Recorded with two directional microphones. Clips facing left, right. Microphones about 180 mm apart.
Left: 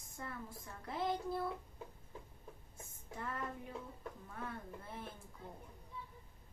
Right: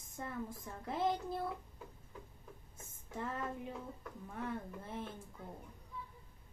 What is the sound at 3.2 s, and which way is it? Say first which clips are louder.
Speech: right 3 dB; 20° right (ahead or behind).